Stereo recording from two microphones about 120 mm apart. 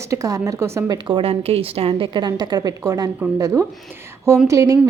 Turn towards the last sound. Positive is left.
turn(degrees=-25)  # may be behind; listen again after turning